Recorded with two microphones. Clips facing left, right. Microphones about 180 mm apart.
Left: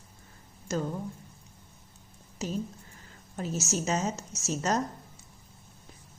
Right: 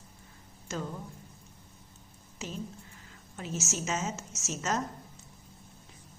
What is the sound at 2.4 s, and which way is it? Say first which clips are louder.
A woman's voice: left 6 dB; 40° left (ahead or behind).